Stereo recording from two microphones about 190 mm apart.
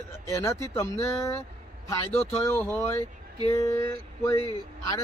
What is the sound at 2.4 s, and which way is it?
Speech, 10° left (ahead or behind).